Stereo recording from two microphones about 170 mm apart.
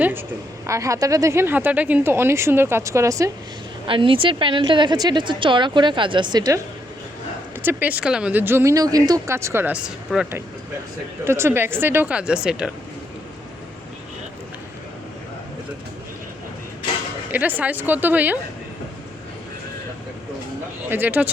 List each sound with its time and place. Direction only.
0.0 s a woman's voice: 10° right (ahead or behind)
3.8 s a woman's voice: 30° right (ahead or behind)
7.6 s speech: 10° right (ahead or behind)
17.3 s speech: 10° right (ahead or behind)
20.9 s speech: 10° right (ahead or behind)